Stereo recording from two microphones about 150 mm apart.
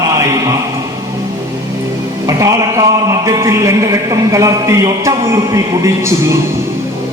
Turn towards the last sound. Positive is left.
turn(degrees=-20)  # may be behind; listen again after turning